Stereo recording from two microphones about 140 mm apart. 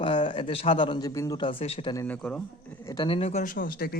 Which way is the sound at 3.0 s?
45° left (ahead or behind).